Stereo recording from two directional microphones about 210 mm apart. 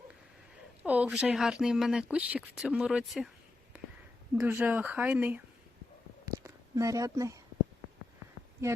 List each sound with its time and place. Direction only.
0.9 s speech: 5° right (ahead or behind)
4.4 s speech: 10° right (ahead or behind)
6.2 s a sound: 15° right (ahead or behind)